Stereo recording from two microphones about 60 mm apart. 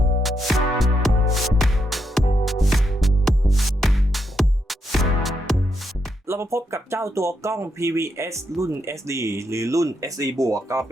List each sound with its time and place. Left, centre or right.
0.2 s music: centre
6.2 s speech: right